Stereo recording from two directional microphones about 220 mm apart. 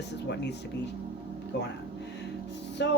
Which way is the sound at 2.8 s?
50° left (ahead or behind).